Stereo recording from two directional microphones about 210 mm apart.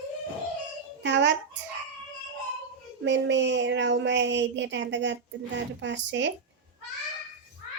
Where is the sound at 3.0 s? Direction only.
60° right (ahead or behind).